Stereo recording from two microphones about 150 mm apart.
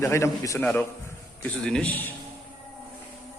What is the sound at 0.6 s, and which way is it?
Speech, 5° left (ahead or behind).